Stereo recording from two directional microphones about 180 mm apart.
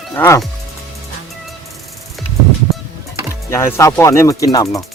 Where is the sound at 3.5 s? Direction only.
15° left (ahead or behind).